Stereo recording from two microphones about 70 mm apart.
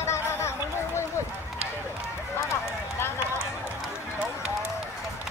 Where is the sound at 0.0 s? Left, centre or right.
Left.